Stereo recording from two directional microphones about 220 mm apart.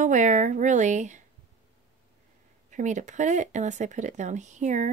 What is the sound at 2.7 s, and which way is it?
A woman's voice, 35° right (ahead or behind).